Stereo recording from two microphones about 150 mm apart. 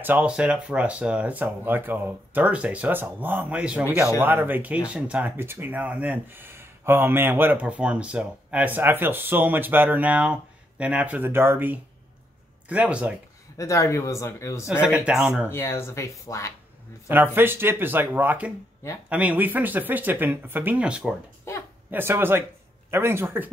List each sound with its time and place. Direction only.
0.0 s speech: 10° right (ahead or behind)
13.6 s speech: 20° left (ahead or behind)
14.7 s speech: 5° right (ahead or behind)
15.5 s speech: 15° left (ahead or behind)
17.1 s speech: 15° right (ahead or behind)
21.5 s speech: 15° left (ahead or behind)
21.9 s speech: 15° right (ahead or behind)